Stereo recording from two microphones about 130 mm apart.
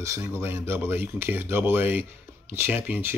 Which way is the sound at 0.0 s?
20° right (ahead or behind).